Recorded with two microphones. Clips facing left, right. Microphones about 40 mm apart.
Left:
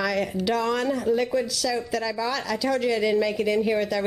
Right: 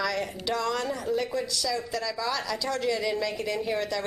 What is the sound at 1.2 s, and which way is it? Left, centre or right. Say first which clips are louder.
Speech: left 5 dB; centre.